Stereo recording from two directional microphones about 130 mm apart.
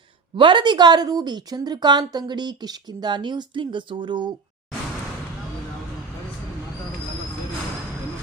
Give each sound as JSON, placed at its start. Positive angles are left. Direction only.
{"t": 0.3, "sound": "a woman's voice", "side_deg": -40}